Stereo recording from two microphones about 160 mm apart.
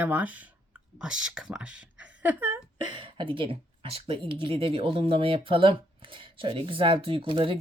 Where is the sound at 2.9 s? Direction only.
30° right (ahead or behind).